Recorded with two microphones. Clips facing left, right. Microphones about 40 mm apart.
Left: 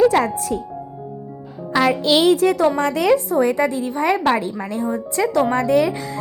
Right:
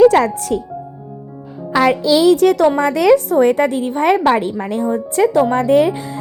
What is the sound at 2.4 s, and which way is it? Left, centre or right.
Speech, right.